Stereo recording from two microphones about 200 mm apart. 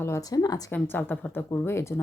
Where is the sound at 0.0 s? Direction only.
15° left (ahead or behind).